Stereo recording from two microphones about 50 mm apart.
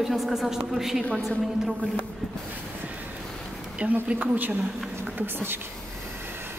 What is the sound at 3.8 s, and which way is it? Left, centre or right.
Speech, right.